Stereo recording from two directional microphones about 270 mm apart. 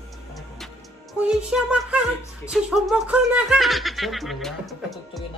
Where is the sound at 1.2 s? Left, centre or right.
Centre.